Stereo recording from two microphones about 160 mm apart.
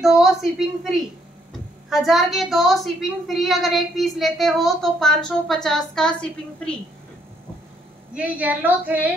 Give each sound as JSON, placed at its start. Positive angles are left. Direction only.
{"t": 0.0, "sound": "a woman's voice", "side_deg": 0}
{"t": 8.2, "sound": "a woman's voice", "side_deg": -10}